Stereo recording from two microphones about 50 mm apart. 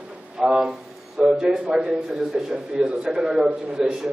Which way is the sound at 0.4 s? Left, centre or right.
Centre.